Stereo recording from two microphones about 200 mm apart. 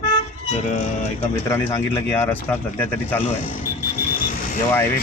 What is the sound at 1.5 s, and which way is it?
Speech, 15° left (ahead or behind).